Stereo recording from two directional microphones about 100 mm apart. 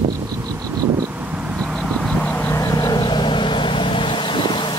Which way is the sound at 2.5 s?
35° left (ahead or behind).